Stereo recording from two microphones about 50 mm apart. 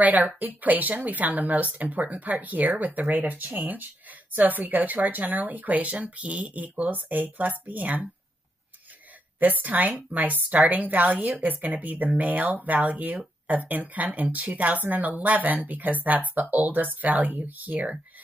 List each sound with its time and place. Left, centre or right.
0.0 s speech: right
9.4 s speech: right